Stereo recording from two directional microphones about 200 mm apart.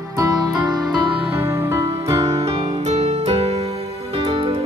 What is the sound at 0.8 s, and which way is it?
Music, 25° right (ahead or behind).